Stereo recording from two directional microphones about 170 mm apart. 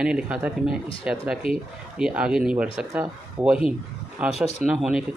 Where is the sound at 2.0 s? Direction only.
5° right (ahead or behind).